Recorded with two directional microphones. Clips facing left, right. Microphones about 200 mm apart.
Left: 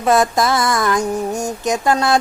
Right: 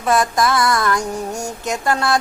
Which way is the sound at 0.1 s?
25° left (ahead or behind).